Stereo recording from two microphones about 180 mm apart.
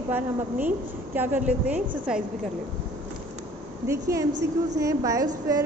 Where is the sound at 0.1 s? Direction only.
10° right (ahead or behind).